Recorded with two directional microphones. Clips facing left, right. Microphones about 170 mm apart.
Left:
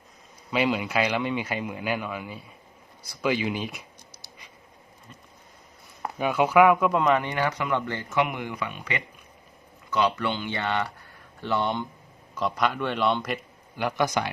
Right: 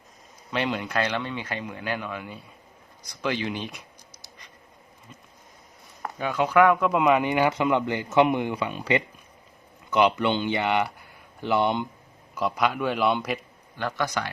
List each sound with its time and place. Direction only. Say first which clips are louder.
0.5 s a man's voice: left 2 dB; 5° left (ahead or behind)
6.0 s speech: left 2 dB; 10° left (ahead or behind)
7.0 s speech: right 3 dB; 10° right (ahead or behind)
12.3 s a man's voice: right 1 dB; 5° right (ahead or behind)
13.7 s speech: left 3 dB; 15° left (ahead or behind)